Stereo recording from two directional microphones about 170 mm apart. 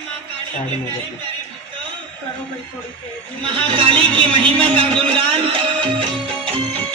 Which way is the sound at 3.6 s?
30° right (ahead or behind).